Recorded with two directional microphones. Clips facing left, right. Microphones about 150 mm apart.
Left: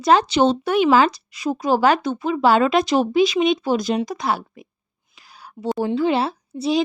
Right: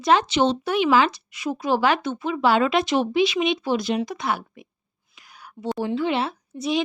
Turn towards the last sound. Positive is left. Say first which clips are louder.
# left 4 dB
turn(degrees=30)  # may be behind; listen again after turning